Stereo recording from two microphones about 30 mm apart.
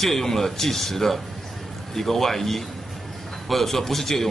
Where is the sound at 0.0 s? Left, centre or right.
Centre.